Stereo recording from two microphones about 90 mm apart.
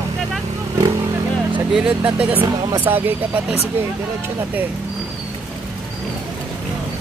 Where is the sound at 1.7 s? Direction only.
10° right (ahead or behind).